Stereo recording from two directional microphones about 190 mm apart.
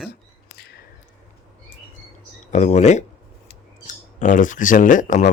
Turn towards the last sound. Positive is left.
turn(degrees=45)  # may be behind; listen again after turning